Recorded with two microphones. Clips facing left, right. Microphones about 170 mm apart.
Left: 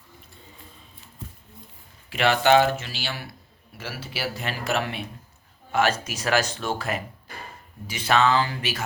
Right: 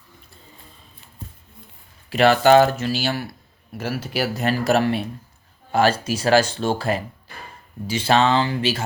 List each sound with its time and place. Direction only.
2.0 s speech: 40° right (ahead or behind)